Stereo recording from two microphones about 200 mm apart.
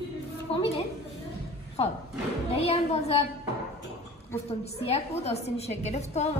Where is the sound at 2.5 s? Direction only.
30° left (ahead or behind).